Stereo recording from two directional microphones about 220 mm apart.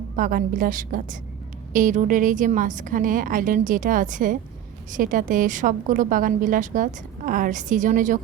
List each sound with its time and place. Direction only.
0.2 s a woman's voice: 40° right (ahead or behind)